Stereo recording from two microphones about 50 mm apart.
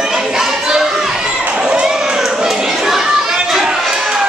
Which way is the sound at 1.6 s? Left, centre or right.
Centre.